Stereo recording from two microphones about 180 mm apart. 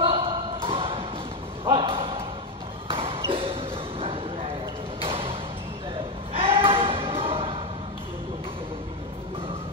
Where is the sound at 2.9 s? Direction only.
30° right (ahead or behind).